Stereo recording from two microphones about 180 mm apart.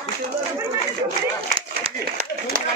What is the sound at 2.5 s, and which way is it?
Run, 50° right (ahead or behind).